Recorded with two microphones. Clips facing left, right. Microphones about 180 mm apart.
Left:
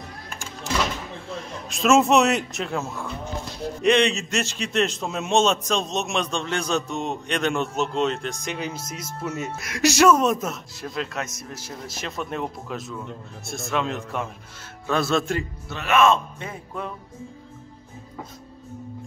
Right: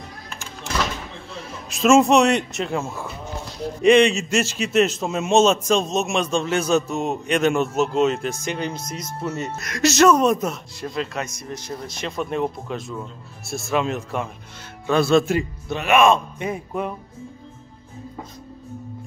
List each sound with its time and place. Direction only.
1.3 s a man's voice: centre (ahead or behind)
15.3 s speech: 15° right (ahead or behind)